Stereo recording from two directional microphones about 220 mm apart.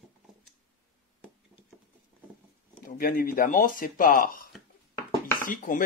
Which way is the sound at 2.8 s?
40° left (ahead or behind).